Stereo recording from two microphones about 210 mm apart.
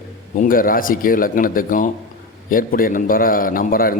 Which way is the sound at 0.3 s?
40° left (ahead or behind).